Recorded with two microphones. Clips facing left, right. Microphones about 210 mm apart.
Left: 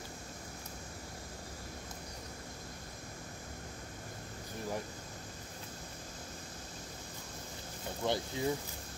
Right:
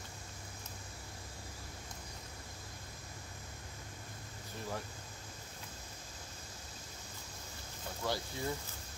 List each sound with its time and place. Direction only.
8.0 s speech: 20° left (ahead or behind)